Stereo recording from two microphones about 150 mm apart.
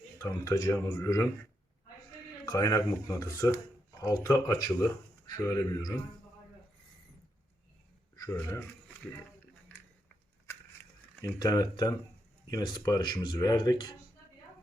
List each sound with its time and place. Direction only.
0.2 s speech: 20° left (ahead or behind)
2.5 s speech: 25° left (ahead or behind)
8.1 s a sound: 20° left (ahead or behind)
8.4 s speech: 10° left (ahead or behind)
11.3 s speech: 25° left (ahead or behind)